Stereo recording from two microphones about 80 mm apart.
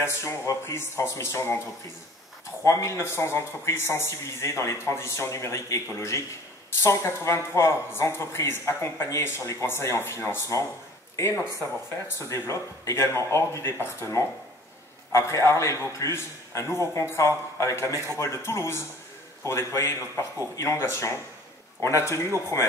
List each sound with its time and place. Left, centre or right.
0.0 s speech: left
2.6 s speech: left
12.2 s speech: left